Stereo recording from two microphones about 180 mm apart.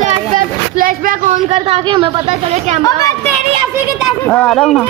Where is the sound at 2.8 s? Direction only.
20° left (ahead or behind).